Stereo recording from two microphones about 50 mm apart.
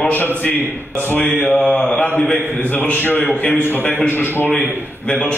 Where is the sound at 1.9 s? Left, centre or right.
Left.